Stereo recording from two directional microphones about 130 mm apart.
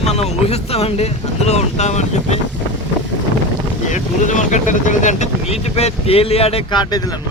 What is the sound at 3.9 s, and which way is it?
Speech, 75° left (ahead or behind).